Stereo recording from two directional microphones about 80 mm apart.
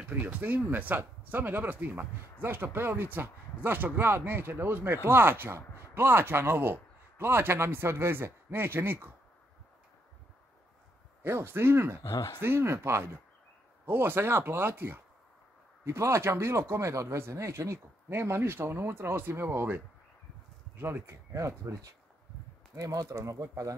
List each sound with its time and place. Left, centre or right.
0.0 s speech: centre
11.2 s speech: right
12.0 s speech: left
12.4 s speech: right